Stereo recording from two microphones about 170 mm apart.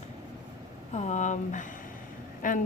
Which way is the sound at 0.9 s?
45° left (ahead or behind).